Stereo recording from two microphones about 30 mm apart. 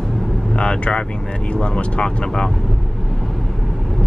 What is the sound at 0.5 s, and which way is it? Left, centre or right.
Speech, left.